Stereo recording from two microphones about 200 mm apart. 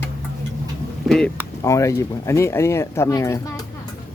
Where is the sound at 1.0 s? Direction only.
Centre (ahead or behind).